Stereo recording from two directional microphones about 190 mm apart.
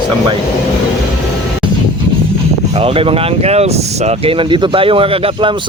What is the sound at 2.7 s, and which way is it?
Speech, 30° right (ahead or behind).